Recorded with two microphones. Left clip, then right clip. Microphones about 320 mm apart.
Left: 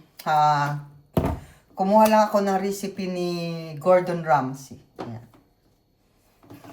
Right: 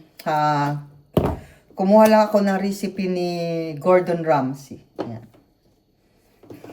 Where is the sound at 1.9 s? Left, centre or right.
Left.